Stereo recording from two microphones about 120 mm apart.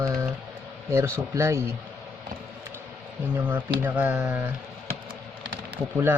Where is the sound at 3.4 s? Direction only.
15° right (ahead or behind).